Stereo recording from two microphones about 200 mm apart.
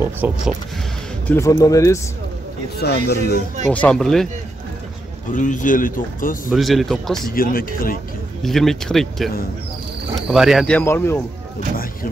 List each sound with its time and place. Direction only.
0.2 s speech: 10° right (ahead or behind)
1.2 s speech: 15° left (ahead or behind)
2.8 s speech: 50° left (ahead or behind)
3.6 s speech: 5° left (ahead or behind)
5.3 s speech: 40° left (ahead or behind)
6.5 s speech: centre (ahead or behind)
7.2 s speech: 45° left (ahead or behind)
8.4 s speech: centre (ahead or behind)
10.8 s speech: 10° left (ahead or behind)